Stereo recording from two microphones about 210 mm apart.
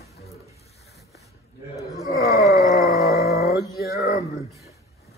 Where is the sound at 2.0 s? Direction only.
15° right (ahead or behind).